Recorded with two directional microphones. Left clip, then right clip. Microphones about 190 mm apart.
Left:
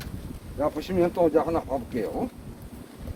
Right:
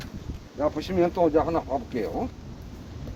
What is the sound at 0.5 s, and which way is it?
Speech, 15° right (ahead or behind).